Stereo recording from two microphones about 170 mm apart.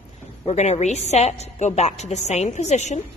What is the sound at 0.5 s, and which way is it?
A woman's voice, 40° left (ahead or behind).